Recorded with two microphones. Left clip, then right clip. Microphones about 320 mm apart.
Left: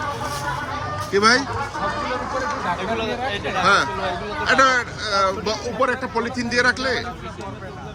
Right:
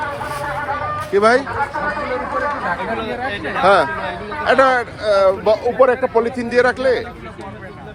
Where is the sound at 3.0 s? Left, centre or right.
Left.